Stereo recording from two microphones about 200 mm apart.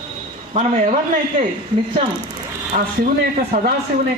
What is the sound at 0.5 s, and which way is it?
Speech, 35° right (ahead or behind).